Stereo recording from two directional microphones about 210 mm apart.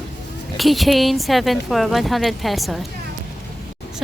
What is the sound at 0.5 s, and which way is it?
A woman's voice, centre (ahead or behind).